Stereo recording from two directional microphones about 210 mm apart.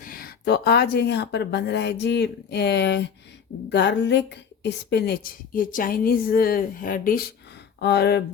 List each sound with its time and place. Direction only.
0.0 s a woman's voice: 45° left (ahead or behind)